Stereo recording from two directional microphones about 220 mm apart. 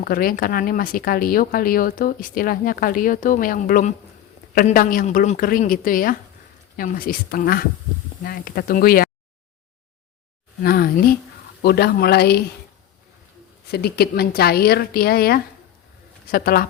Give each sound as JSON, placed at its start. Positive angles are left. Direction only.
{"t": 0.0, "sound": "speech", "side_deg": 40}
{"t": 10.6, "sound": "a woman's voice", "side_deg": 45}
{"t": 13.7, "sound": "a woman's voice", "side_deg": 45}